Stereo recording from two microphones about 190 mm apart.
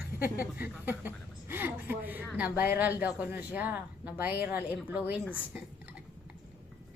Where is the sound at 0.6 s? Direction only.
10° right (ahead or behind).